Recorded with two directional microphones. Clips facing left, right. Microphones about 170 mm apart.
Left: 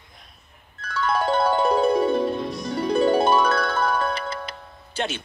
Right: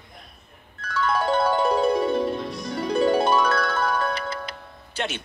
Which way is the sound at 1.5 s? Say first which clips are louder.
Left 1 dB; 25° left (ahead or behind).